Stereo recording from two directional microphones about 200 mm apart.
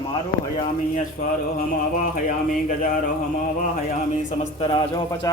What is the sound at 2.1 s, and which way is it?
Speech, 40° left (ahead or behind).